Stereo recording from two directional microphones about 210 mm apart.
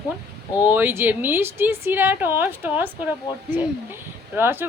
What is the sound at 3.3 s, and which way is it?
Speech, 20° left (ahead or behind).